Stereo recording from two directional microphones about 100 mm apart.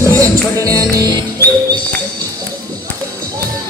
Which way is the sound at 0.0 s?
35° right (ahead or behind).